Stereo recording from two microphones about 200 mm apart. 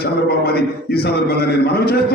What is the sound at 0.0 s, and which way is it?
A man's voice, 50° left (ahead or behind).